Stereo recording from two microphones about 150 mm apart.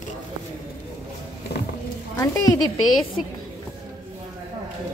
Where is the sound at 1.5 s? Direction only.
90° left.